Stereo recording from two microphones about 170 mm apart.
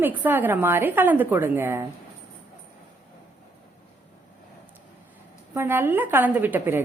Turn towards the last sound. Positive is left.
turn(degrees=-10)  # may be behind; listen again after turning